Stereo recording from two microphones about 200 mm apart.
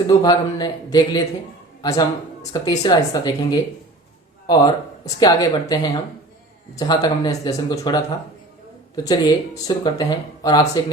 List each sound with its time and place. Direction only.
0.1 s speech: 20° left (ahead or behind)
9.0 s speech: 20° left (ahead or behind)